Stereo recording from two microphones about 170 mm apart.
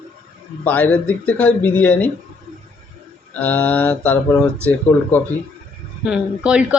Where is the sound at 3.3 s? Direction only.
10° left (ahead or behind).